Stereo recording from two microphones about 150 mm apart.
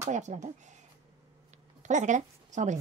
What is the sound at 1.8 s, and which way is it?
Speech, 55° right (ahead or behind).